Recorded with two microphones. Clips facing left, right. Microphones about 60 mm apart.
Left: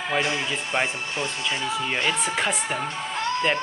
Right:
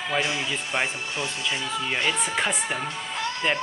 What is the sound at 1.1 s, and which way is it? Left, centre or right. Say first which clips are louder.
Speech: left 1 dB; left.